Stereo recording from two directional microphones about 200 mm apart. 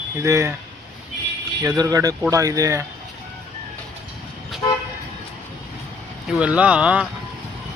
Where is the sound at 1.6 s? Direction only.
20° right (ahead or behind).